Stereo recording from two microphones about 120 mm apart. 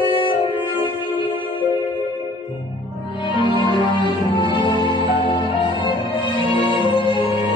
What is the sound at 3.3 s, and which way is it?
Music, 40° left (ahead or behind).